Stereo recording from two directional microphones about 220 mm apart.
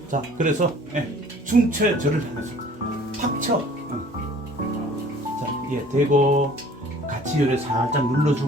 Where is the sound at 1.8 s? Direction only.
40° right (ahead or behind).